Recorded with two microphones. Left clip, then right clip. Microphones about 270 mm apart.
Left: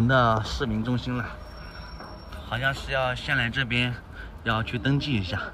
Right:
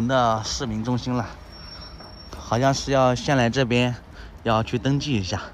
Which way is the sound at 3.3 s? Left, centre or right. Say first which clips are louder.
Right 4 dB; centre.